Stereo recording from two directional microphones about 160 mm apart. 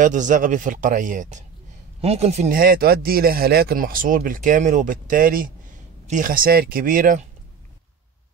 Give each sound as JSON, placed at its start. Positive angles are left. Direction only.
{"t": 0.0, "sound": "speech", "side_deg": -55}
{"t": 2.0, "sound": "speech", "side_deg": -40}
{"t": 2.6, "sound": "speech", "side_deg": -70}